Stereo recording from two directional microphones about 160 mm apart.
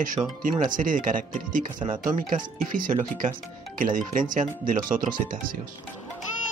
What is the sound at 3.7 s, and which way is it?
Speech, 55° right (ahead or behind).